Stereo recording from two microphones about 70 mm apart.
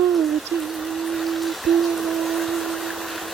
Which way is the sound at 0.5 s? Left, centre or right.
Centre.